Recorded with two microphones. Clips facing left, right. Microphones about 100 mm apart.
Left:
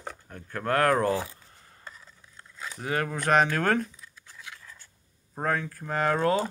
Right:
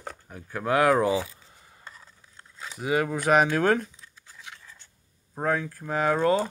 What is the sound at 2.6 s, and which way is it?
Speech, 10° right (ahead or behind).